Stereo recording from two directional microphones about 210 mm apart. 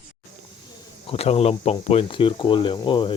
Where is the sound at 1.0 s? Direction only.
30° left (ahead or behind).